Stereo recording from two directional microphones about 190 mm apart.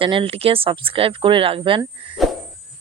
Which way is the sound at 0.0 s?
25° right (ahead or behind).